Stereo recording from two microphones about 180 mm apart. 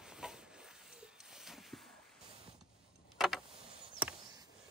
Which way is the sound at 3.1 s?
Centre (ahead or behind).